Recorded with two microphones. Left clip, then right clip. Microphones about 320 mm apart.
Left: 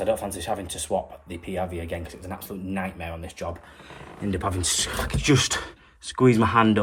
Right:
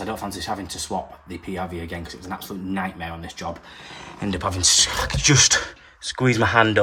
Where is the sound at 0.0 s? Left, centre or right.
Left.